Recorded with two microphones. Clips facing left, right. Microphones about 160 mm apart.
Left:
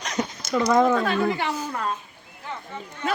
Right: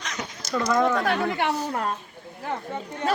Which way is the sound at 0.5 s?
20° left (ahead or behind).